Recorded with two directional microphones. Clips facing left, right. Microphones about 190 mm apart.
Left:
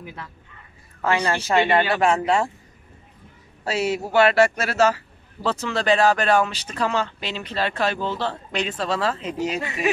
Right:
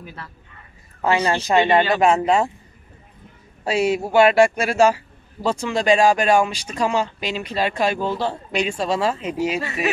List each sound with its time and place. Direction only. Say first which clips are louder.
0.0 s speech: even; 15° left (ahead or behind)
1.0 s a man's voice: right 3 dB; 15° right (ahead or behind)
3.6 s a man's voice: right 4 dB; 15° right (ahead or behind)